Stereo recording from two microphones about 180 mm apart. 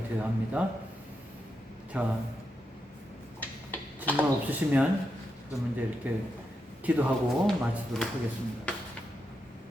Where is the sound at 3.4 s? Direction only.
10° left (ahead or behind).